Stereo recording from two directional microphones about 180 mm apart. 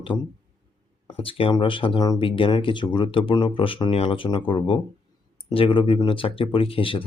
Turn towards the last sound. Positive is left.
turn(degrees=30)  # may be behind; listen again after turning